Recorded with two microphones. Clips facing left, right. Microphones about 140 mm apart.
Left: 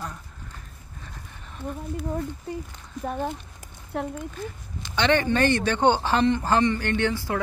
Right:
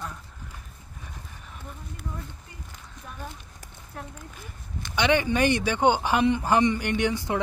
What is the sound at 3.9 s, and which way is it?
Speech, 75° left (ahead or behind).